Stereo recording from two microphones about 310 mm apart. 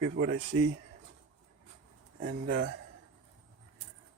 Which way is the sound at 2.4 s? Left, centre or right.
Right.